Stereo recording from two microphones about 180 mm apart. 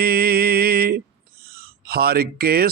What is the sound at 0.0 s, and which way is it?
Music, 55° right (ahead or behind).